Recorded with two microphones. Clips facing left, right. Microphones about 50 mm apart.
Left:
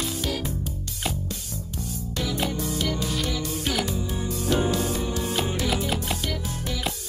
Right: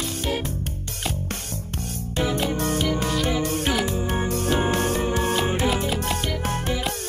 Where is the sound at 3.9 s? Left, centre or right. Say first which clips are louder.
Right 5 dB; right.